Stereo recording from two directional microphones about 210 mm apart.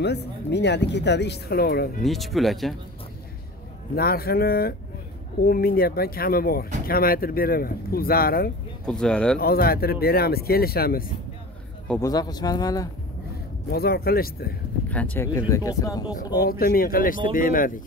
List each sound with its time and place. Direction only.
0.0 s speech: 55° left (ahead or behind)
2.0 s speech: centre (ahead or behind)
3.9 s speech: 45° left (ahead or behind)
8.8 s speech: 5° left (ahead or behind)
9.4 s speech: 45° left (ahead or behind)
11.9 s speech: 15° left (ahead or behind)
13.7 s speech: 45° left (ahead or behind)
14.9 s speech: 5° left (ahead or behind)
16.3 s speech: 45° left (ahead or behind)